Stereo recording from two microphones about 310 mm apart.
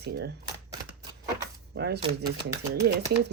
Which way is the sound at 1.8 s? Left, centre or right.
Right.